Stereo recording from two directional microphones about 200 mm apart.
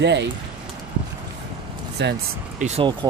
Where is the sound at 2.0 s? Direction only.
60° right (ahead or behind).